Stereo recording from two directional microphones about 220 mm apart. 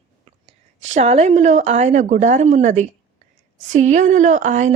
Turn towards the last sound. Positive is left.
turn(degrees=-35)  # may be behind; listen again after turning